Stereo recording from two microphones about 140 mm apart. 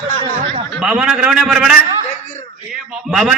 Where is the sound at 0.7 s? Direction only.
5° right (ahead or behind).